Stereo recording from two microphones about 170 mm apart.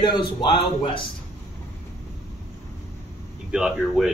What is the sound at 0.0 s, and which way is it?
Speech, 25° left (ahead or behind).